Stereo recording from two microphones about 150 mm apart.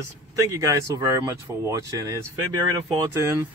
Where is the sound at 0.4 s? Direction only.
20° right (ahead or behind).